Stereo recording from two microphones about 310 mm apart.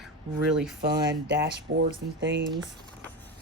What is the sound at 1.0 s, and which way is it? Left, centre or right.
Speech, right.